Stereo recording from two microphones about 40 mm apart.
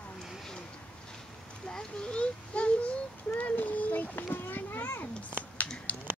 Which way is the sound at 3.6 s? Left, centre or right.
Left.